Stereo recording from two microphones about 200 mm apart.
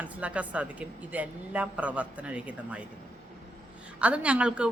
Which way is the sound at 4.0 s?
5° right (ahead or behind).